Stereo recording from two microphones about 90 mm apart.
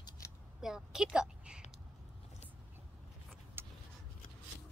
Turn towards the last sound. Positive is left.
turn(degrees=-25)  # may be behind; listen again after turning